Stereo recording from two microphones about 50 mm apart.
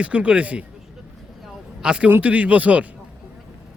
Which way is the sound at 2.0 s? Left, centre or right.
Right.